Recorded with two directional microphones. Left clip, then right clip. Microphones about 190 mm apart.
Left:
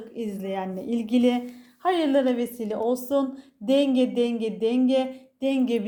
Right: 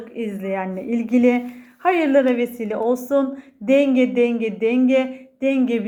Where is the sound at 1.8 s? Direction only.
15° left (ahead or behind).